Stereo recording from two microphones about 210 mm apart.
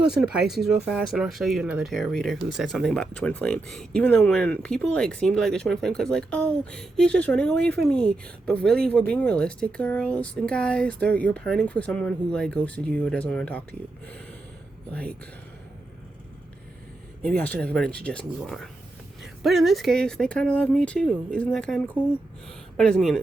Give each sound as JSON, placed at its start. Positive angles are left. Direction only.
{"t": 0.0, "sound": "speech", "side_deg": -5}
{"t": 17.2, "sound": "speech", "side_deg": 5}